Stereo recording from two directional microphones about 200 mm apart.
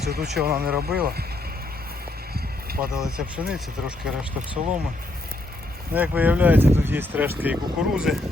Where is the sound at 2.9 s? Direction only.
5° right (ahead or behind).